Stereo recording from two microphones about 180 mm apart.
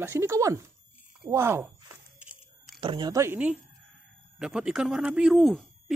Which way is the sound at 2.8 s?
25° right (ahead or behind).